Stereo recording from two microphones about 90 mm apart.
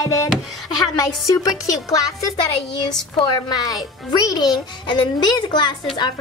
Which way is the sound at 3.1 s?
55° left (ahead or behind).